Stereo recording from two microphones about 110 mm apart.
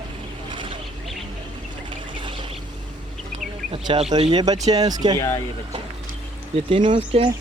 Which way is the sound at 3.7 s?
55° right (ahead or behind).